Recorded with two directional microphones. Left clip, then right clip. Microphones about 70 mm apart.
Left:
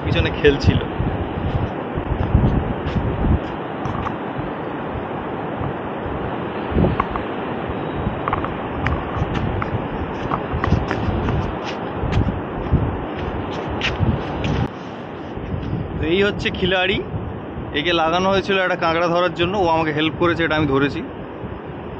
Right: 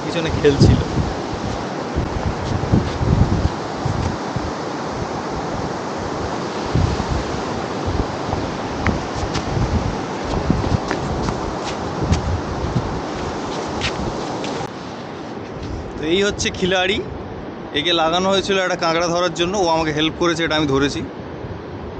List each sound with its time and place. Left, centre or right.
0.1 s speech: centre
2.3 s vehicle: right
6.3 s waves: right
8.9 s vehicle: right
13.6 s a sound: right
16.0 s speech: right
17.7 s speech: centre